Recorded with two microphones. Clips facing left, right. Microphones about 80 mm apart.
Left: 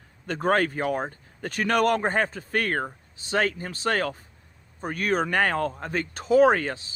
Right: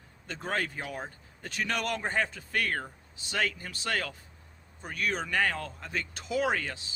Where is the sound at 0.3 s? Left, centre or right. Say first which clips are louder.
Left 10 dB; left.